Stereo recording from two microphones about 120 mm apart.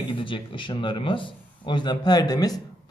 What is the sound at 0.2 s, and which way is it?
A man's voice, 45° left (ahead or behind).